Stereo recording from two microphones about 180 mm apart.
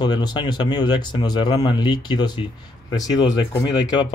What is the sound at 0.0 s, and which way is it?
Speech, 25° left (ahead or behind).